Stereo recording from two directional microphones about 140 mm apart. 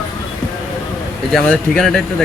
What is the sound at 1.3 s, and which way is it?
Speech, 5° left (ahead or behind).